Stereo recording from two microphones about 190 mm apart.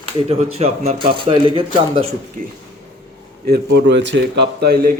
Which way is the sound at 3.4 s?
60° right (ahead or behind).